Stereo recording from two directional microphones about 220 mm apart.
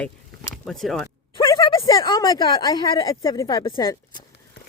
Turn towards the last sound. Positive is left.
turn(degrees=20)  # may be behind; listen again after turning